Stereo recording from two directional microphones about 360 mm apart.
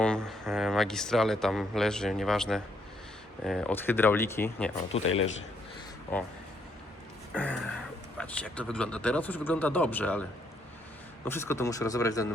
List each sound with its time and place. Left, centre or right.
0.0 s speech: centre
4.9 s speech: left
6.1 s speech: centre
7.3 s speech: centre
11.3 s speech: centre